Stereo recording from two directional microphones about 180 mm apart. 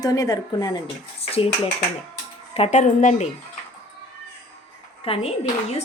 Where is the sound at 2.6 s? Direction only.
35° left (ahead or behind).